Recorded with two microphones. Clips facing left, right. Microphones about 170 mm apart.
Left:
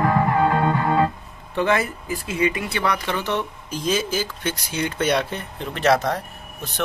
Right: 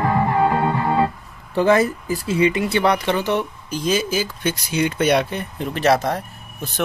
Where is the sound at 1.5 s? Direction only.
35° right (ahead or behind).